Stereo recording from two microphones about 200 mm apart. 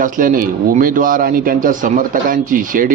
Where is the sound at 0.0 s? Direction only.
40° right (ahead or behind).